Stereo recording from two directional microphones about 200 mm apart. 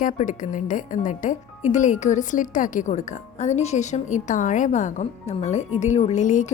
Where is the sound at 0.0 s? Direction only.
40° left (ahead or behind).